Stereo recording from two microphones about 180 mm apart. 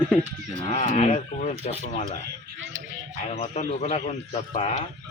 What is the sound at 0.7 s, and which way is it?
A man's voice, 40° left (ahead or behind).